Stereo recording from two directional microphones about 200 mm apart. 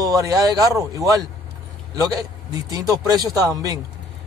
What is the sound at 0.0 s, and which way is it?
Speech, 15° right (ahead or behind).